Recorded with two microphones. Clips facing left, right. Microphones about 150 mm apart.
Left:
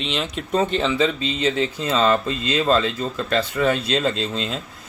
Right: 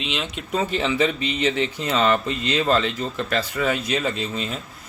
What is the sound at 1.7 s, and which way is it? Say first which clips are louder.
Speech: left 1 dB; 25° left (ahead or behind).